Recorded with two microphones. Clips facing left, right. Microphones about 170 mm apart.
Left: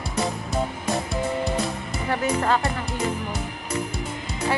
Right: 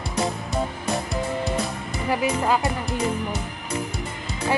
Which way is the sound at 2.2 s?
10° right (ahead or behind).